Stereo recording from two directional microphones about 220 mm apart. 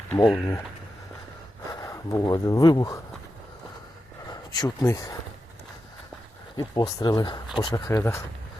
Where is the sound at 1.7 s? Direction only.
15° left (ahead or behind).